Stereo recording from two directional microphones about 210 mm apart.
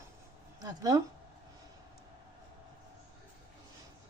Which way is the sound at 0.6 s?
20° right (ahead or behind).